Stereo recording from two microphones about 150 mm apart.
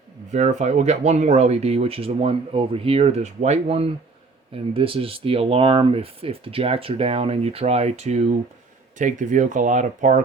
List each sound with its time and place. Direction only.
0.3 s speech: 50° right (ahead or behind)